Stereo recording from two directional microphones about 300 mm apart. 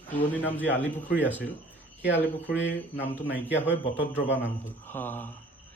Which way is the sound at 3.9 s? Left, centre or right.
Left.